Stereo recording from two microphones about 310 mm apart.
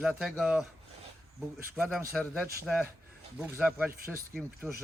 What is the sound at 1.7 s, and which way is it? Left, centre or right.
Speech, centre.